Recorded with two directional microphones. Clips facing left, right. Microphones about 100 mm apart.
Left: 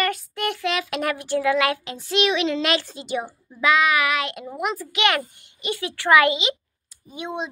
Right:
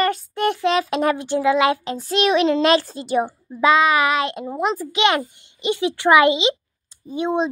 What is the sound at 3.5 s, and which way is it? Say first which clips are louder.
A child's voice: right 3 dB; 30° right (ahead or behind).